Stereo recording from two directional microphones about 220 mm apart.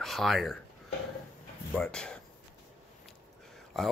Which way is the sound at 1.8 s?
5° left (ahead or behind).